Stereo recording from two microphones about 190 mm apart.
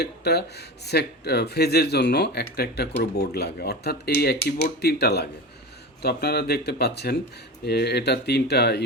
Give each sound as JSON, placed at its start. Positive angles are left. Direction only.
{"t": 0.0, "sound": "speech", "side_deg": 60}